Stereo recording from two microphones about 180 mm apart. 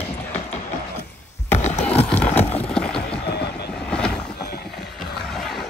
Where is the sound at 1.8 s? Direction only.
10° left (ahead or behind).